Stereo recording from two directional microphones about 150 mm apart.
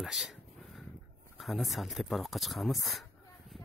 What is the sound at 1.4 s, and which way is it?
Speech, centre (ahead or behind).